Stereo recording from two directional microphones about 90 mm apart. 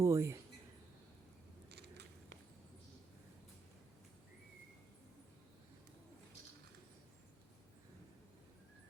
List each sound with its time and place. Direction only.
0.0 s speech: 30° right (ahead or behind)